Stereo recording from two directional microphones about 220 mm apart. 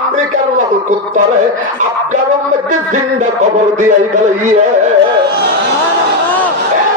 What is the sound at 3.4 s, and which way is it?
A man's voice, 35° right (ahead or behind).